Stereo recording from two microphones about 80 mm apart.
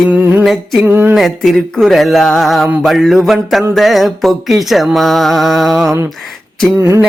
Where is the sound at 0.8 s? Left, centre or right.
Right.